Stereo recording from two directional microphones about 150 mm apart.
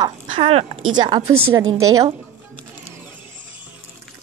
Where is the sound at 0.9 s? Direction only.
30° right (ahead or behind).